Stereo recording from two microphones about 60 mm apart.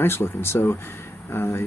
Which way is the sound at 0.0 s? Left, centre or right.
Left.